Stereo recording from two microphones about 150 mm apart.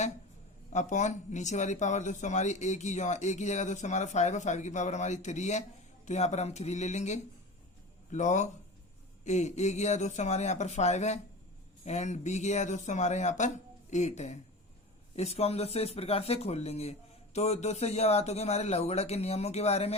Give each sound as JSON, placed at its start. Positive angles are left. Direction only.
{"t": 0.7, "sound": "speech", "side_deg": 50}